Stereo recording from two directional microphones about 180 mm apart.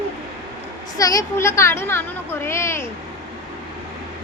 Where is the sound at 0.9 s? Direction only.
20° left (ahead or behind).